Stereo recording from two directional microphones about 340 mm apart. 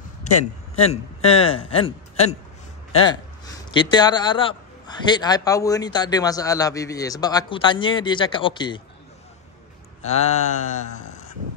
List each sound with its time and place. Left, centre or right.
0.3 s a man's voice: left
0.8 s a man's voice: centre
10.0 s a sound: left